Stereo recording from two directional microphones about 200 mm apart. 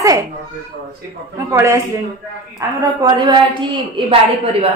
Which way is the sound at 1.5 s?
15° right (ahead or behind).